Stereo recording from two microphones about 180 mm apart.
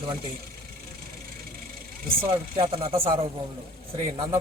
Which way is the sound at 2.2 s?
15° right (ahead or behind).